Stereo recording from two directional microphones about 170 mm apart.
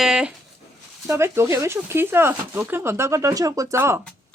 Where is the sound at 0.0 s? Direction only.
5° right (ahead or behind).